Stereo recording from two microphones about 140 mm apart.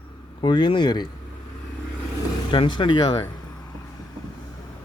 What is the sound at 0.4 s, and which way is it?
Speech, 35° left (ahead or behind).